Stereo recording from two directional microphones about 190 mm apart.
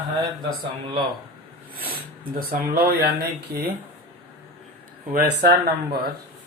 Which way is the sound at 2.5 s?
55° right (ahead or behind).